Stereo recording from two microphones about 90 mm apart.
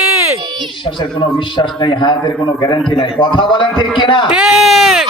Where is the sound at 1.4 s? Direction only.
60° left (ahead or behind).